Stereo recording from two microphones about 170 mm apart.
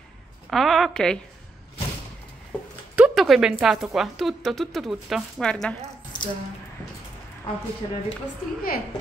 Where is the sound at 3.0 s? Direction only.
Centre (ahead or behind).